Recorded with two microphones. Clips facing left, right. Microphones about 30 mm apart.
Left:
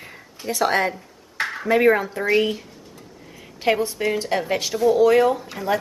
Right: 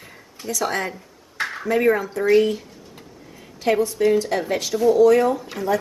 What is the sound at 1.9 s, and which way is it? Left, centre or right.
Speech, left.